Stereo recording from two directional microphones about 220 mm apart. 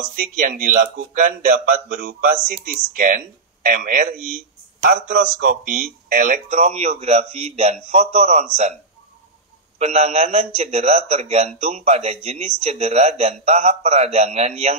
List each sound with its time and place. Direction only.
0.1 s a man's voice: 40° right (ahead or behind)
9.8 s a man's voice: 30° right (ahead or behind)